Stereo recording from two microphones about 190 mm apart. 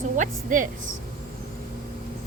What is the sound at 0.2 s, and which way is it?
Speech, 40° right (ahead or behind).